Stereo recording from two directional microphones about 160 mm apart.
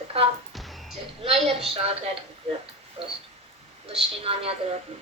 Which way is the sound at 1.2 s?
40° right (ahead or behind).